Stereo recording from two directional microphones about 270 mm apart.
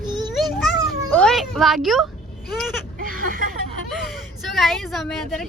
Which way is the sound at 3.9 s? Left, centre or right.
Centre.